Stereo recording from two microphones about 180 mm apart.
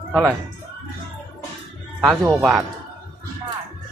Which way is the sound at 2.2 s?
10° right (ahead or behind).